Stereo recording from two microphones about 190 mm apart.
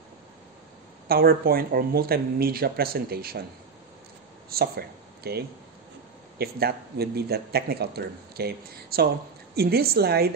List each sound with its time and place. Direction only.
1.0 s speech: 50° right (ahead or behind)
4.5 s speech: 55° right (ahead or behind)